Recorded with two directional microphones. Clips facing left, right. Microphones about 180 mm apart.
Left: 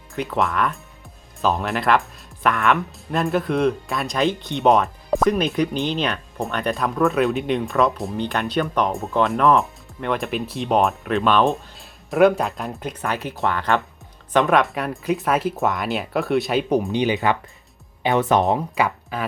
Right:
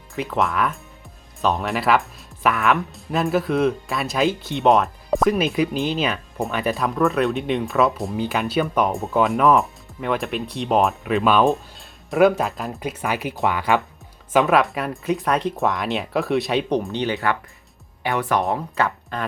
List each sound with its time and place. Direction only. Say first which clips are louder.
0.1 s speech: even; centre (ahead or behind)